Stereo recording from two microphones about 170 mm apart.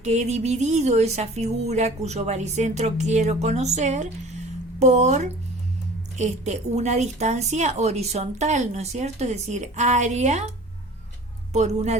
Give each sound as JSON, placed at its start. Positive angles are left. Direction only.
{"t": 0.0, "sound": "speech", "side_deg": -40}
{"t": 11.5, "sound": "speech", "side_deg": -40}